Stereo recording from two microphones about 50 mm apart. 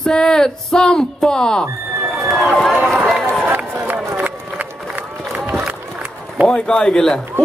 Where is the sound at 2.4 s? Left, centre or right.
Centre.